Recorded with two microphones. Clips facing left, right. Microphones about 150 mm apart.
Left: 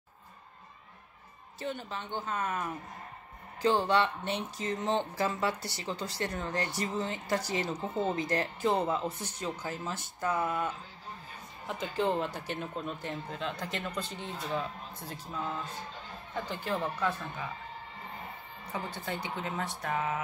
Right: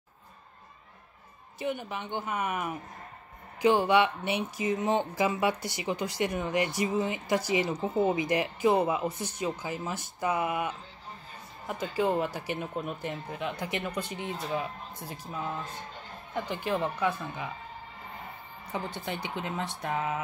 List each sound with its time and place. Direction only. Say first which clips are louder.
1.6 s speech: right 4 dB; 15° right (ahead or behind)
18.7 s speech: right 2 dB; 20° right (ahead or behind)